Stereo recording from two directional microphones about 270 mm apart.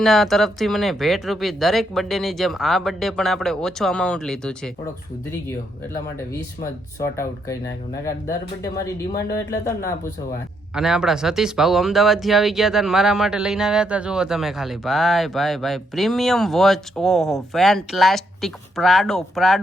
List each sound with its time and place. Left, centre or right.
0.0 s speech: centre
8.0 s speech: centre
10.8 s speech: centre